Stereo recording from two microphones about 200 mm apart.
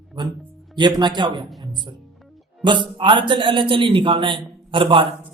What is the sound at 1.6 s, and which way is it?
Music, 20° right (ahead or behind).